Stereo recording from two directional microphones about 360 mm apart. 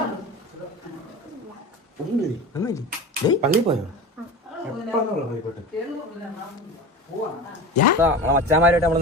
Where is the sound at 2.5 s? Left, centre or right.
Centre.